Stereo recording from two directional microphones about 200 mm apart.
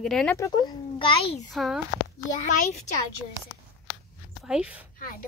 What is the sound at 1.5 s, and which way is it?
Speech, centre (ahead or behind).